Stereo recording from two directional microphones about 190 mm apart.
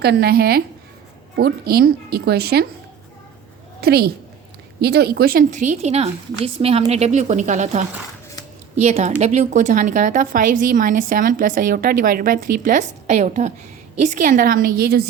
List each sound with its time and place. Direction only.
0.0 s a woman's voice: 60° right (ahead or behind)
3.8 s a woman's voice: 55° right (ahead or behind)